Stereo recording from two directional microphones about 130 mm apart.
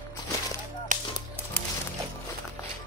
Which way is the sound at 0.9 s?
90° right.